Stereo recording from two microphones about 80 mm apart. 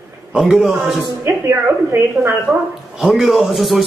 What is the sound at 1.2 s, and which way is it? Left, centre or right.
Speech, right.